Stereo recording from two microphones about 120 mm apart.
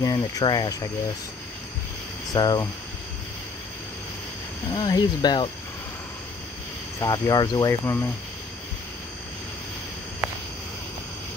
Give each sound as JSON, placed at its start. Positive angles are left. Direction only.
{"t": 0.0, "sound": "speech", "side_deg": 35}
{"t": 2.3, "sound": "speech", "side_deg": 35}
{"t": 4.7, "sound": "speech", "side_deg": 35}
{"t": 7.0, "sound": "speech", "side_deg": 35}
{"t": 10.2, "sound": "a sound", "side_deg": -5}